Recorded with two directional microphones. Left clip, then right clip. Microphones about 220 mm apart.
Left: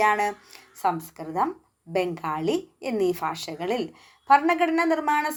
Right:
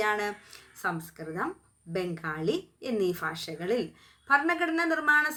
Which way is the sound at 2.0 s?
35° right (ahead or behind).